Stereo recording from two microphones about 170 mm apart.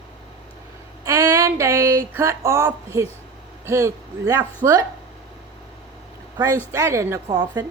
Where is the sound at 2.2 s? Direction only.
15° right (ahead or behind).